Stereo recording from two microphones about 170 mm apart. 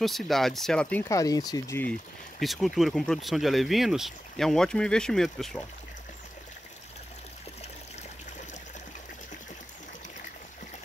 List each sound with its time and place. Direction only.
0.0 s speech: centre (ahead or behind)
1.0 s speech: 20° left (ahead or behind)
2.4 s speech: centre (ahead or behind)